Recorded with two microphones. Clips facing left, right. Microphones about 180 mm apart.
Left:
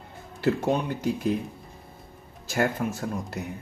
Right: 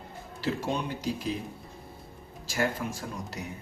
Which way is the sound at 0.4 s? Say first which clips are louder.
Left 6 dB; 55° left (ahead or behind).